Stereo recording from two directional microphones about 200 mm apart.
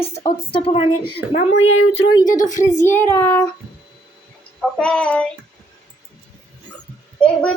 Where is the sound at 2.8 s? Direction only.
10° left (ahead or behind).